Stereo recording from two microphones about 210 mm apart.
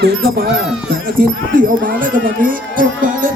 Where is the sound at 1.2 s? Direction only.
40° right (ahead or behind).